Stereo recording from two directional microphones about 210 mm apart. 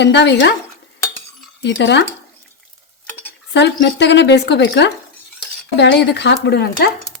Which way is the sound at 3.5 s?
55° left (ahead or behind).